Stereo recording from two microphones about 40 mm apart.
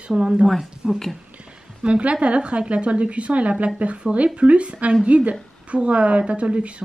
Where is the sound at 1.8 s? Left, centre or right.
Right.